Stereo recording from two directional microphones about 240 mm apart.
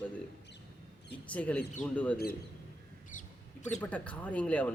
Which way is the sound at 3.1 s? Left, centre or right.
Left.